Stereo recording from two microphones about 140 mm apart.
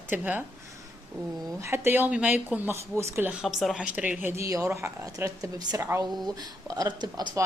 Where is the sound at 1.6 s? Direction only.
20° right (ahead or behind).